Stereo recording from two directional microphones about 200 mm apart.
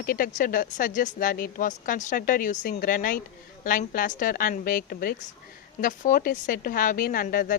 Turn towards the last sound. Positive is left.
turn(degrees=45)  # may be behind; listen again after turning